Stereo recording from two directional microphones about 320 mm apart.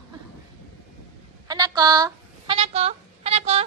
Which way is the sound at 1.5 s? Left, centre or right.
Centre.